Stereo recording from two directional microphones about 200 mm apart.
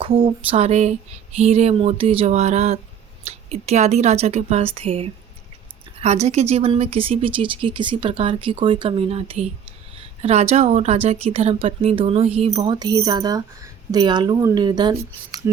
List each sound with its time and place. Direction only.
0.0 s a woman's voice: 25° right (ahead or behind)